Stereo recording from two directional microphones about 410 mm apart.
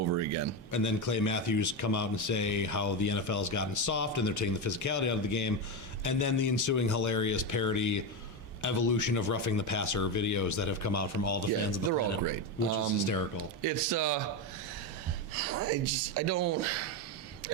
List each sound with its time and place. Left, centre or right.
0.1 s a sound: right
0.7 s a man's voice: left
13.6 s speech: right
15.4 s speech: right